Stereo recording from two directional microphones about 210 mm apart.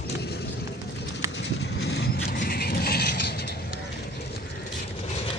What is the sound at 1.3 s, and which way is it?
Horse, 55° left (ahead or behind).